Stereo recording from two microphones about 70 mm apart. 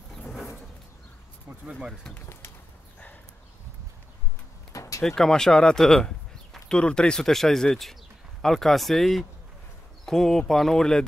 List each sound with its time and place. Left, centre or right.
0.3 s a sound: centre
4.7 s door: left
5.0 s speech: centre